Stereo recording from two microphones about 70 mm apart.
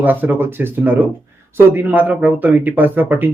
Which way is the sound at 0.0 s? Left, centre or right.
Right.